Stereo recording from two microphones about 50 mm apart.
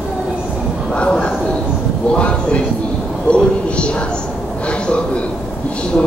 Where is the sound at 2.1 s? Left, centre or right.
Left.